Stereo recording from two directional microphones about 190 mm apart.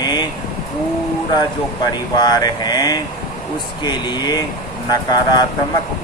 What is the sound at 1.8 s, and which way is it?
Speech, 20° left (ahead or behind).